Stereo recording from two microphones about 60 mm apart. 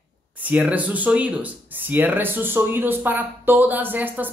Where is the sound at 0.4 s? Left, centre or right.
Right.